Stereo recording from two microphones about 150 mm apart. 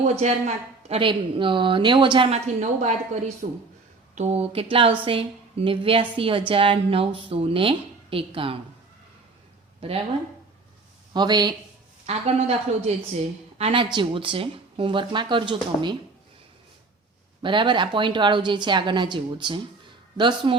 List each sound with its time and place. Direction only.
0.2 s a woman's voice: 50° right (ahead or behind)
2.6 s a woman's voice: 50° right (ahead or behind); by 8.5 s 35° right (ahead or behind)
11.1 s speech: 30° right (ahead or behind)
12.0 s a woman's voice: 45° right (ahead or behind)
17.4 s a woman's voice: 35° right (ahead or behind)